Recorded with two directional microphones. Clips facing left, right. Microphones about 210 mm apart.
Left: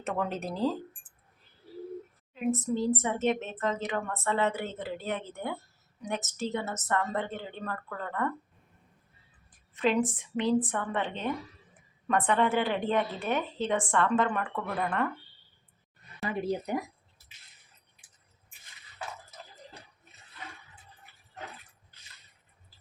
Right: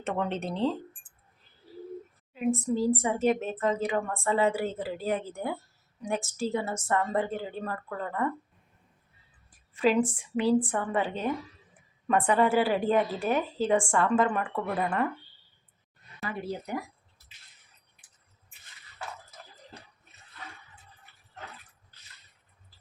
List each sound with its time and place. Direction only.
0.0 s speech: centre (ahead or behind)
2.3 s a woman's voice: 10° right (ahead or behind)
9.7 s a woman's voice: 10° right (ahead or behind)
16.2 s speech: 20° left (ahead or behind)